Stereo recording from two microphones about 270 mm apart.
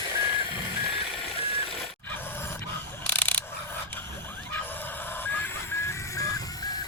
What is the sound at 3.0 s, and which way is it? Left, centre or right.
Mechanisms, centre.